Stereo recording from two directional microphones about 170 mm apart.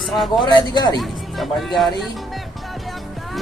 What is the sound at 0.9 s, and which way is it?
Speech, centre (ahead or behind).